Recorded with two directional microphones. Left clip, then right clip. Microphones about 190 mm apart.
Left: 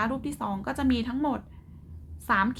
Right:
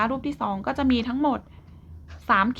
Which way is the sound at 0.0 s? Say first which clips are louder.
Right 4 dB; 20° right (ahead or behind).